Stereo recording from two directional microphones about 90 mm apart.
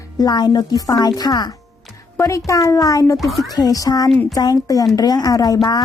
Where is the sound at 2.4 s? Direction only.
35° left (ahead or behind).